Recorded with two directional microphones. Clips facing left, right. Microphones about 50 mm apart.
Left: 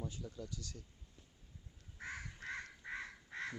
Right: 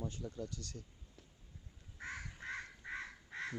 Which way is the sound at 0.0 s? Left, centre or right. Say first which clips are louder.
Right 2 dB; centre.